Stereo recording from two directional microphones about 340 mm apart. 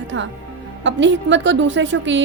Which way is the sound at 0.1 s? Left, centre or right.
Right.